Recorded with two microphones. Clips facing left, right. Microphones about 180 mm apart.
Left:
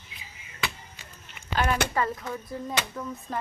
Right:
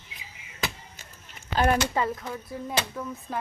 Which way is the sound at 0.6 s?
40° right (ahead or behind).